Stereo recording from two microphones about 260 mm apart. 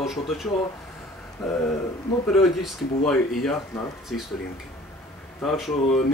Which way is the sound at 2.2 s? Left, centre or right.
Centre.